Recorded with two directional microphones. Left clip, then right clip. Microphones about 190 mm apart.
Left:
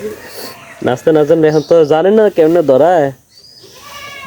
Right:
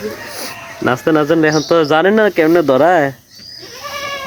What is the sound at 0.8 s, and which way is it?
Speech, 15° left (ahead or behind).